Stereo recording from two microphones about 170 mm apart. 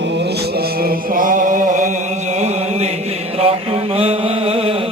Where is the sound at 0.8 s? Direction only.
55° right (ahead or behind).